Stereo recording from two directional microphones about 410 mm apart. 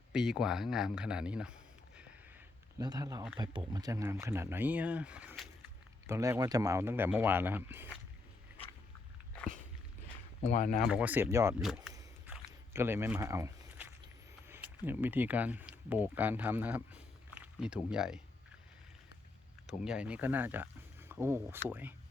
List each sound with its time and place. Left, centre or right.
0.1 s speech: centre
2.7 s speech: centre
10.4 s speech: centre
10.8 s a sound: centre
14.4 s speech: centre
19.6 s speech: centre